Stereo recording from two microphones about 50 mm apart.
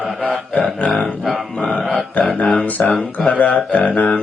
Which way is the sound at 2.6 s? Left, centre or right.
Left.